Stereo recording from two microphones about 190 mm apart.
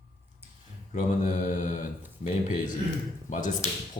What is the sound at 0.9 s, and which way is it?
Speech, 40° left (ahead or behind).